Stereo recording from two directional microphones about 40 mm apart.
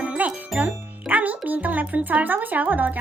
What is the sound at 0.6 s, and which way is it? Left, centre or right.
Music, right.